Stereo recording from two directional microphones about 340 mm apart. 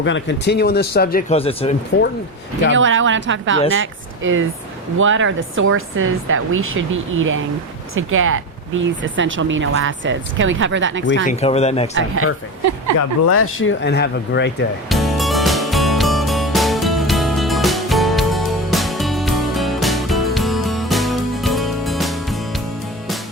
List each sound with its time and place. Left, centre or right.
0.0 s speech: left
2.7 s speech: right
11.3 s speech: centre
11.9 s speech: right
13.0 s speech: left
14.8 s music: centre